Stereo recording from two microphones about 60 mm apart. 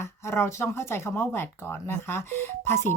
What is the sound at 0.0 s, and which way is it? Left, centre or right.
A woman's voice, left.